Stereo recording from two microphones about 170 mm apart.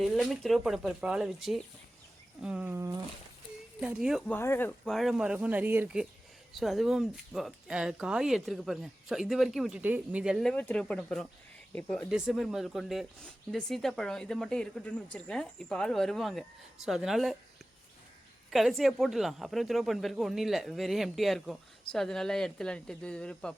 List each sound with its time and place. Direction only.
0.0 s speech: centre (ahead or behind)
2.4 s a sound: 5° right (ahead or behind)
3.8 s speech: 5° right (ahead or behind)
4.3 s speech: 15° left (ahead or behind)
4.9 s speech: centre (ahead or behind)
18.5 s speech: centre (ahead or behind)